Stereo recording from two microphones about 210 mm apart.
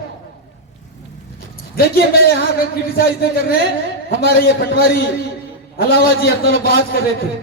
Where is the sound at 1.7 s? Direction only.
45° left (ahead or behind).